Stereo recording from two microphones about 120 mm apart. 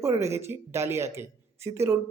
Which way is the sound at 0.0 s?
20° right (ahead or behind).